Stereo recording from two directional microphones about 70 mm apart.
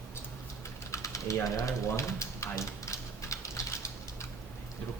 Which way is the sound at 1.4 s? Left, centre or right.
Left.